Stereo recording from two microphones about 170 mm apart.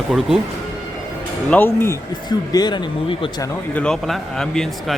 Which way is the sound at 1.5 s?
10° left (ahead or behind).